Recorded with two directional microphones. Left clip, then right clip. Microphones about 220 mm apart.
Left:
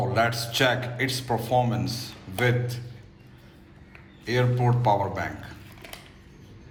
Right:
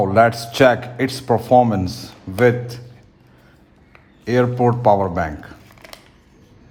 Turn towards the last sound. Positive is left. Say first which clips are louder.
# right 8 dB
turn(degrees=-40)  # may be behind; listen again after turning